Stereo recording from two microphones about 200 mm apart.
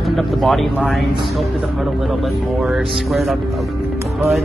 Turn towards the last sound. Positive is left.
turn(degrees=0)  # may be behind; listen again after turning